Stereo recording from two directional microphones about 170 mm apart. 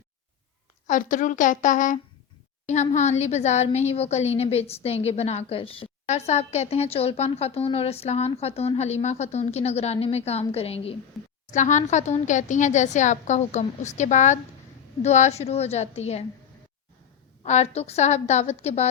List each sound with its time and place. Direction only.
0.9 s a woman's voice: 50° left (ahead or behind); by 10.9 s 35° left (ahead or behind)
11.5 s a woman's voice: 45° left (ahead or behind)
17.4 s a woman's voice: 40° left (ahead or behind)